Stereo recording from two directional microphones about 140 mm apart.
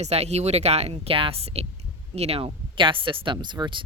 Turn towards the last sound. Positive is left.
turn(degrees=-30)  # may be behind; listen again after turning